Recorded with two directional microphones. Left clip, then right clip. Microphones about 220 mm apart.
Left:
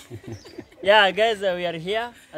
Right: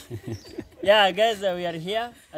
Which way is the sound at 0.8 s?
Centre (ahead or behind).